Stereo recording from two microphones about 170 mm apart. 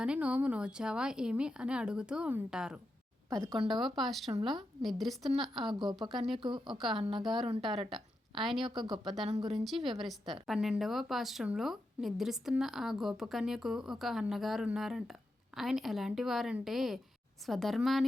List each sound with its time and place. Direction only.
0.0 s speech: 5° right (ahead or behind)
7.0 s a woman's voice: 30° right (ahead or behind)
7.9 s a woman's voice: centre (ahead or behind)
9.2 s a woman's voice: 25° right (ahead or behind)
9.5 s speech: centre (ahead or behind)